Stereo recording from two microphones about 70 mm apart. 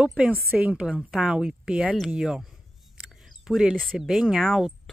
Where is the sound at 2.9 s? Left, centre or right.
Centre.